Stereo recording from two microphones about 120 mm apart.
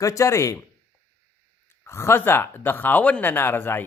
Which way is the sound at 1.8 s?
20° left (ahead or behind).